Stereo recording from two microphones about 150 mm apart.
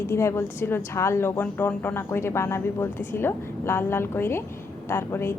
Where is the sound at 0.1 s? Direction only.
20° left (ahead or behind).